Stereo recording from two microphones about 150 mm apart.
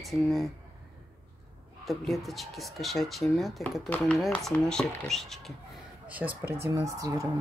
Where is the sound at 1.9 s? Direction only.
Centre (ahead or behind).